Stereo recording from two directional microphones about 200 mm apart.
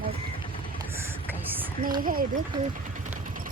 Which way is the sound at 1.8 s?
45° right (ahead or behind).